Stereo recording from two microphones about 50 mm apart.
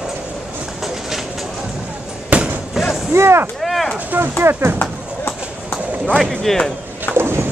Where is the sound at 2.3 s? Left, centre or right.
Right.